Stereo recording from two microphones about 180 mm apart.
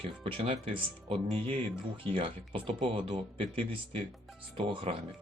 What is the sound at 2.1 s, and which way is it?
Speech, 30° right (ahead or behind).